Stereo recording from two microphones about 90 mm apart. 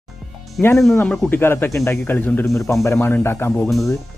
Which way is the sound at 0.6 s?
10° left (ahead or behind).